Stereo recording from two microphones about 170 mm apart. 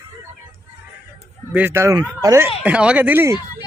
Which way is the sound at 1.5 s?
15° right (ahead or behind).